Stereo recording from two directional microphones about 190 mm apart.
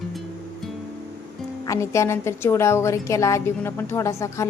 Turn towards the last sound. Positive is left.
turn(degrees=15)  # may be behind; listen again after turning